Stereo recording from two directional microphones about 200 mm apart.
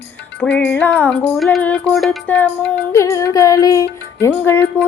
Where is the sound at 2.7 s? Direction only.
15° left (ahead or behind).